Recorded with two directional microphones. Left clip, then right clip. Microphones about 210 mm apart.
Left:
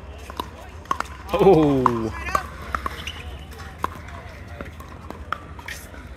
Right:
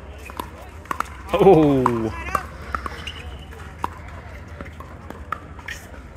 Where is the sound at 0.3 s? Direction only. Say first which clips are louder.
Left 1 dB; 40° right (ahead or behind).